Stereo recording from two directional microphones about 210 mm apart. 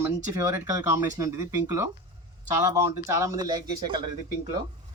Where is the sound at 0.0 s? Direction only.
15° right (ahead or behind).